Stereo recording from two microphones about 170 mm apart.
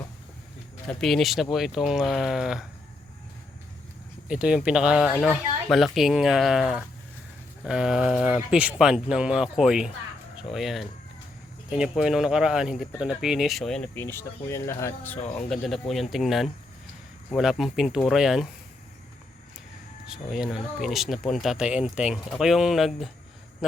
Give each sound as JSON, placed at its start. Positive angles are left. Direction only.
{"t": 0.9, "sound": "speech", "side_deg": 0}
{"t": 4.3, "sound": "speech", "side_deg": -5}
{"t": 5.1, "sound": "speech", "side_deg": 5}
{"t": 15.2, "sound": "speech", "side_deg": 40}
{"t": 15.4, "sound": "speech", "side_deg": 0}
{"t": 20.1, "sound": "speech", "side_deg": -5}